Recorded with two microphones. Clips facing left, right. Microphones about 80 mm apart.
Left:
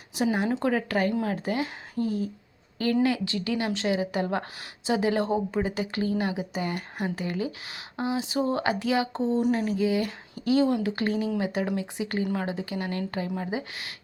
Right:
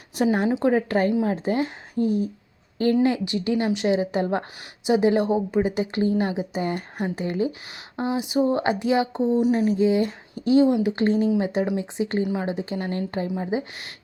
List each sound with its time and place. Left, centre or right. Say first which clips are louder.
0.2 s speech: right 4 dB; right
0.6 s a woman's voice: right 5 dB; right
9.6 s a woman's voice: right 5 dB; right
12.2 s speech: right 3 dB; centre
12.5 s a woman's voice: right 4 dB; right